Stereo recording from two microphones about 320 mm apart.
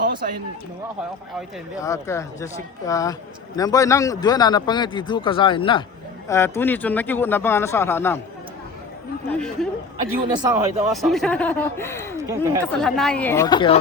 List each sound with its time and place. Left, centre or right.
0.0 s a sound: right
1.8 s speech: centre
9.3 s speech: centre
10.3 s speech: centre
10.9 s speech: centre
12.1 s speech: centre
12.6 s speech: centre